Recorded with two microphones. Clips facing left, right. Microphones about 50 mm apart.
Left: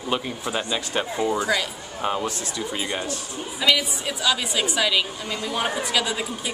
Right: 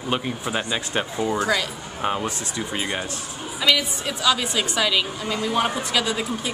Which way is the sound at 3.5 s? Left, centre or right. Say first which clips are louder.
Even; centre.